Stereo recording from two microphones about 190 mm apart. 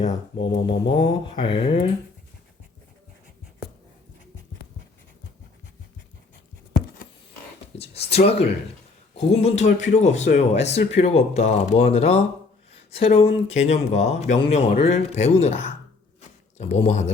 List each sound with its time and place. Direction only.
0.6 s mantra: 25° left (ahead or behind)
7.8 s speech: 30° left (ahead or behind)
12.7 s a sound: 30° left (ahead or behind)
13.6 s speech: 35° left (ahead or behind)